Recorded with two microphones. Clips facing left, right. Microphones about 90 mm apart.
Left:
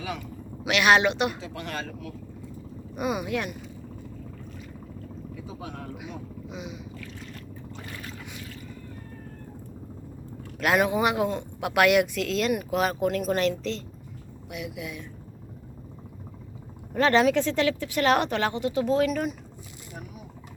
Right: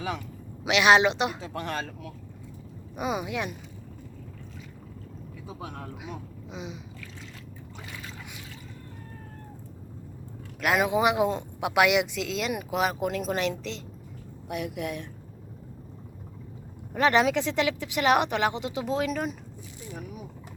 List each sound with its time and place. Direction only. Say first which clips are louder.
0.6 s speech: right 1 dB; 25° right (ahead or behind)
1.4 s speech: right 2 dB; 35° right (ahead or behind)
2.9 s speech: left 2 dB; 20° right (ahead or behind)
6.0 s vehicle: left 2 dB; 30° right (ahead or behind)
10.6 s speech: left 1 dB; 5° right (ahead or behind)
14.5 s speech: right 4 dB; 55° right (ahead or behind)
16.9 s speech: left 2 dB; 15° right (ahead or behind)